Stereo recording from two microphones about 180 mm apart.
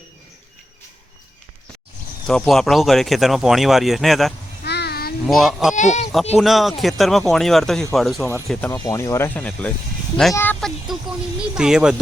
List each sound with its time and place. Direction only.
2.2 s speech: 5° left (ahead or behind)
4.6 s a sound: 65° left (ahead or behind)
5.2 s speech: centre (ahead or behind)
5.7 s speech: 40° left (ahead or behind)
6.3 s speech: centre (ahead or behind)
8.7 s speech: 20° left (ahead or behind)
10.3 s a sound: 10° left (ahead or behind)
10.9 s speech: centre (ahead or behind)